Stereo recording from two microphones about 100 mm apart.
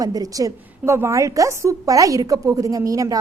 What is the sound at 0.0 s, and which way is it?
A woman's voice, 40° right (ahead or behind).